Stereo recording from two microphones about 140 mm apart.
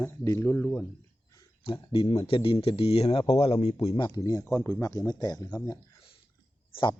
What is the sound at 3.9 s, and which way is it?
Speech, 30° left (ahead or behind).